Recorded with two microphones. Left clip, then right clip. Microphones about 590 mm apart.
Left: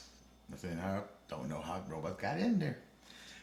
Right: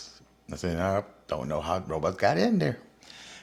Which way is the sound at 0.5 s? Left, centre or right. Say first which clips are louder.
Right 13 dB; right.